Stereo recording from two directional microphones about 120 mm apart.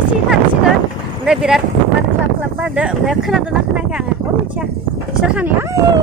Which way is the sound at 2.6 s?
10° right (ahead or behind).